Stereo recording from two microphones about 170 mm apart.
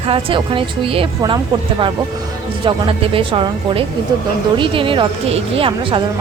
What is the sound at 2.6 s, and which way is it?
A woman's voice, 30° right (ahead or behind).